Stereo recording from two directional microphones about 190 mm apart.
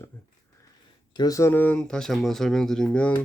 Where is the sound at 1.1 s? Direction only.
20° left (ahead or behind); by 3.1 s 5° left (ahead or behind).